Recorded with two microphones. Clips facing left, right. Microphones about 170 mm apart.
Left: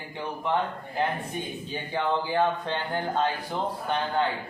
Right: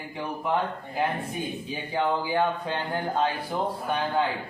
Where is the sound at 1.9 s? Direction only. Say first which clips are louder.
Right 1 dB; 10° right (ahead or behind).